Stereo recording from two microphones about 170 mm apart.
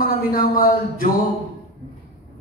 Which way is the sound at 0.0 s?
55° left (ahead or behind).